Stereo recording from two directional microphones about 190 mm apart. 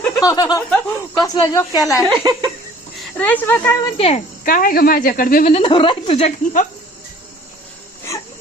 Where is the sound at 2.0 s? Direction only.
20° right (ahead or behind).